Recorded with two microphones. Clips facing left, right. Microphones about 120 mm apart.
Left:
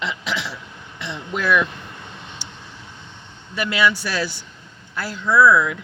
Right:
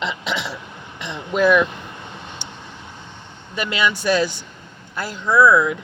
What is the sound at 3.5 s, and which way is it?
Speech, 20° right (ahead or behind).